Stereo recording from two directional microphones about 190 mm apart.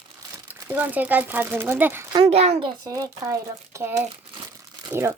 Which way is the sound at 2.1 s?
30° right (ahead or behind).